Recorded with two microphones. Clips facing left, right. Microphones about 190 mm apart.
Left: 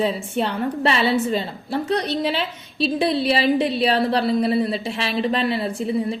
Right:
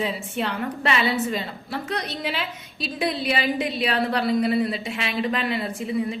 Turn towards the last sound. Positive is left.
turn(degrees=35)  # may be behind; listen again after turning